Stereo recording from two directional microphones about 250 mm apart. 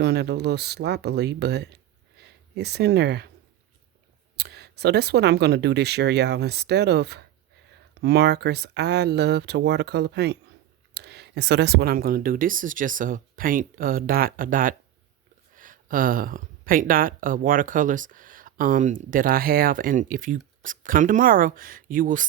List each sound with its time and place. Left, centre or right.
0.0 s speech: right
4.4 s speech: right